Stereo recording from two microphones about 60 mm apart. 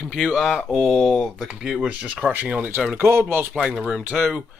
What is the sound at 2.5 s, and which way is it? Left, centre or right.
Speech, right.